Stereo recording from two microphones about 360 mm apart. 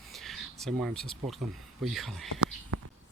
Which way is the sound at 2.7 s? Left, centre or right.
Right.